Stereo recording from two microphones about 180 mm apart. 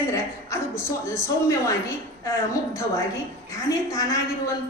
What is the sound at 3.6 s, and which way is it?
Speech, 20° left (ahead or behind).